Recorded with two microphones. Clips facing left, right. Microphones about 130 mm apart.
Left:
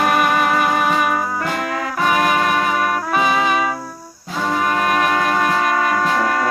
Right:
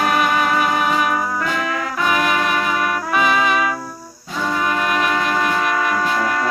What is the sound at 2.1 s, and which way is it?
Music, 45° left (ahead or behind).